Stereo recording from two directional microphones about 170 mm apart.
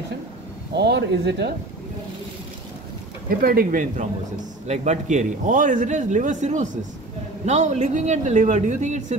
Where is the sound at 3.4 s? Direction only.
60° right (ahead or behind).